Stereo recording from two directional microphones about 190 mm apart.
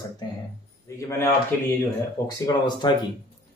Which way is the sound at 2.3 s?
20° left (ahead or behind).